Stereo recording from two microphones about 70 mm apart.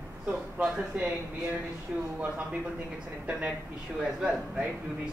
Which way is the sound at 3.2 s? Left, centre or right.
Centre.